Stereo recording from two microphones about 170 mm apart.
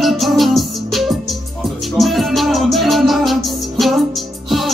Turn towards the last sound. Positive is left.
turn(degrees=0)  # may be behind; listen again after turning